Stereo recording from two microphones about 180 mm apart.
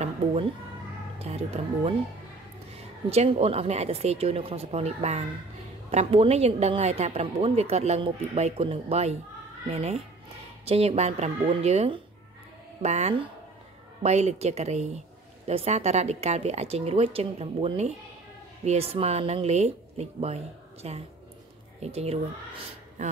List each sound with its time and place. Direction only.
0.0 s a sound: 35° right (ahead or behind)
1.2 s a woman's voice: 35° right (ahead or behind)
3.1 s a woman's voice: 35° right (ahead or behind)